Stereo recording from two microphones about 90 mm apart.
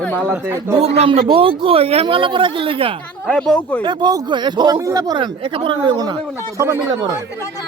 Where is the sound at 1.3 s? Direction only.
80° right.